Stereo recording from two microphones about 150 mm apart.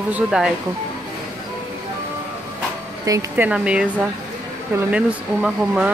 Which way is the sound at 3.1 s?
25° right (ahead or behind).